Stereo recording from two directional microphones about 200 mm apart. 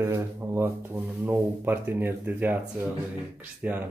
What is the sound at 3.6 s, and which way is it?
Speech, 5° right (ahead or behind).